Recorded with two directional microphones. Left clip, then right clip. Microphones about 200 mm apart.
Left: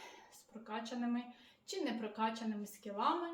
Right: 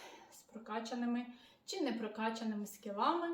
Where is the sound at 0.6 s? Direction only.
5° right (ahead or behind).